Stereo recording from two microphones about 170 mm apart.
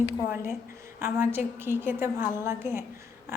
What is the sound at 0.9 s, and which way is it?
A woman's voice, 15° right (ahead or behind).